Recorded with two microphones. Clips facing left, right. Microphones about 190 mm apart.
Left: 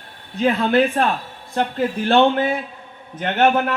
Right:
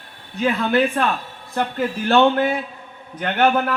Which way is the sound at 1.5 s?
25° left (ahead or behind).